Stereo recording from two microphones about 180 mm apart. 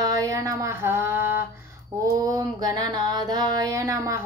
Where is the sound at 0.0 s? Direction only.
20° right (ahead or behind).